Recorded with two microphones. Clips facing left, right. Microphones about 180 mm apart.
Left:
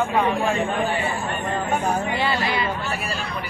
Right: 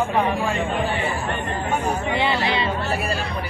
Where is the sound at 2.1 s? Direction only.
20° right (ahead or behind).